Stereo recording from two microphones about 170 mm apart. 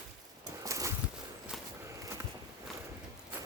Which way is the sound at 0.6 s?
20° right (ahead or behind).